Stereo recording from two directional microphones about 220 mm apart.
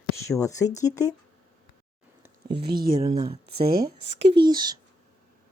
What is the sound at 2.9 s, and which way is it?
Speech, 20° right (ahead or behind).